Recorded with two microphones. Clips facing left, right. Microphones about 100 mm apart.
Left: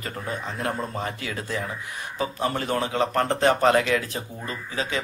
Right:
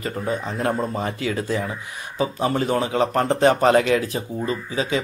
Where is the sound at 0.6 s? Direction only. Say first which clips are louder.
Right 5 dB; 25° right (ahead or behind).